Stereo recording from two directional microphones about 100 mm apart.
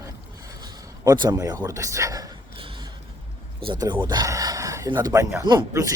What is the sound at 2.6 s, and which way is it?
Music, 60° right (ahead or behind).